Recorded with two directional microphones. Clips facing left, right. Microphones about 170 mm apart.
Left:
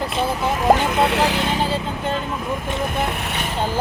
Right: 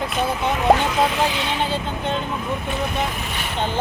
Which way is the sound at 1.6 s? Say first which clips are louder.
Left 1 dB; 5° left (ahead or behind).